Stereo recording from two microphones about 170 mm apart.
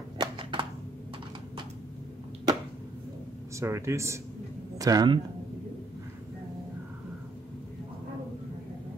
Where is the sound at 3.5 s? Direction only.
15° right (ahead or behind).